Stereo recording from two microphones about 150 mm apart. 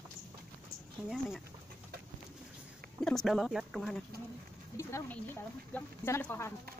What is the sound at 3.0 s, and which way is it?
Speech, 5° left (ahead or behind).